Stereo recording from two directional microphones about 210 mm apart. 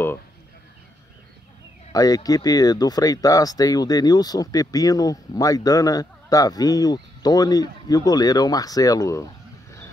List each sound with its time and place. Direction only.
1.9 s speech: 15° left (ahead or behind)